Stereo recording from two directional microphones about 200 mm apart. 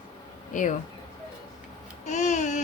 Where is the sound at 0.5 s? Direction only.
40° left (ahead or behind).